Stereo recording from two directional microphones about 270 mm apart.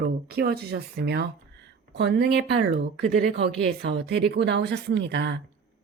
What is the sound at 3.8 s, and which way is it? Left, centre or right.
Speech, right.